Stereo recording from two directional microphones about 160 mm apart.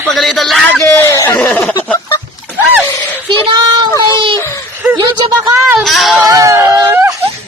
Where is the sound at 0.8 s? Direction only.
15° left (ahead or behind).